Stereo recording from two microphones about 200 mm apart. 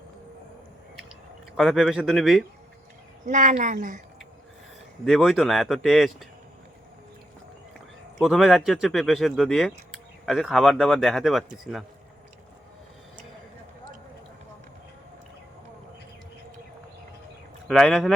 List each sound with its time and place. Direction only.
1.5 s speech: centre (ahead or behind)
3.2 s speech: 40° right (ahead or behind)
5.0 s speech: centre (ahead or behind)
8.2 s speech: centre (ahead or behind)
17.7 s speech: centre (ahead or behind)